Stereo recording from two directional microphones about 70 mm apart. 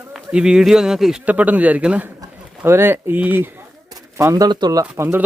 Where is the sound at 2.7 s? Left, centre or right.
Right.